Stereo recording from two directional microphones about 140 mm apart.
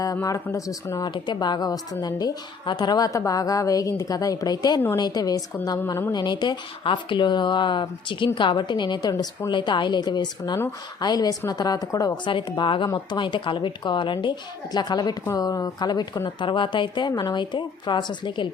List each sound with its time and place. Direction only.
0.0 s a woman's voice: 25° left (ahead or behind)